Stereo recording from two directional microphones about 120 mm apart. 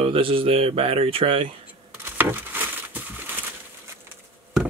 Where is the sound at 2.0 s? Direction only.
15° right (ahead or behind).